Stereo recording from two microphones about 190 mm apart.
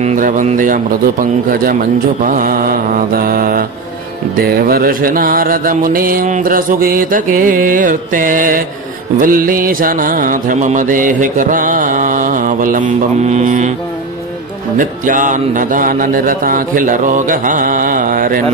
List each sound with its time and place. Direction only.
0.0 s speech: 45° right (ahead or behind)
1.5 s mantra: 50° right (ahead or behind)
14.8 s mantra: 45° right (ahead or behind)